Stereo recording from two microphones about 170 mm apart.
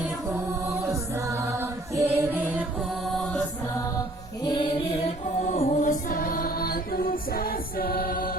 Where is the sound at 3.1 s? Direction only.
5° left (ahead or behind).